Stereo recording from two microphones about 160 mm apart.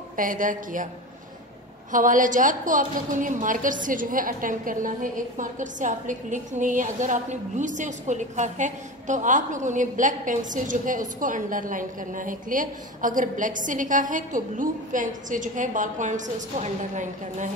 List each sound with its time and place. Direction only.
0.1 s a woman's voice: 60° right (ahead or behind)
1.9 s a woman's voice: 55° right (ahead or behind)